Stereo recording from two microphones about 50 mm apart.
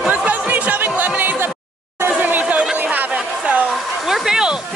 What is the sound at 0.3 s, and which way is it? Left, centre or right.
Music, right.